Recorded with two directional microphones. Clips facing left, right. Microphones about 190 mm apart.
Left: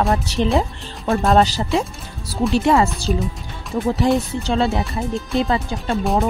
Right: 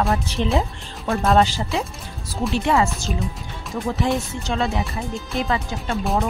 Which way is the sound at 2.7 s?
35° left (ahead or behind).